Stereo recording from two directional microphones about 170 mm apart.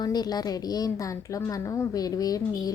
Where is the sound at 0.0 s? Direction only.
25° left (ahead or behind).